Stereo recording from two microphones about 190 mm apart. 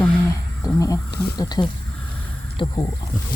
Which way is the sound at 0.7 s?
15° left (ahead or behind).